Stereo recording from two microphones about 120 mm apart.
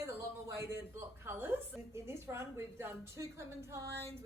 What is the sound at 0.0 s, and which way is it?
A woman's voice, 25° right (ahead or behind).